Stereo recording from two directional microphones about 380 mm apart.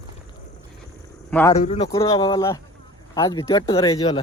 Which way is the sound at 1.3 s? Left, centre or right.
Centre.